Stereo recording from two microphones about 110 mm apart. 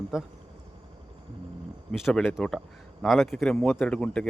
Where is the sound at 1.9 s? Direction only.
Centre (ahead or behind).